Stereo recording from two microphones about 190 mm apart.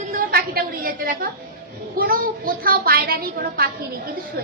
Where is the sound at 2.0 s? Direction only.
50° right (ahead or behind).